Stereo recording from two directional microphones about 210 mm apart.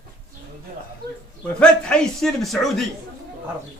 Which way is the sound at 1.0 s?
50° right (ahead or behind).